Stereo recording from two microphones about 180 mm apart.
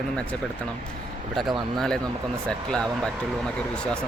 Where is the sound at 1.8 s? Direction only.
5° left (ahead or behind).